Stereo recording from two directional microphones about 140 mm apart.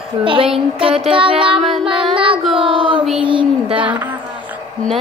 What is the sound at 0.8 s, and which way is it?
Child singing, 45° right (ahead or behind).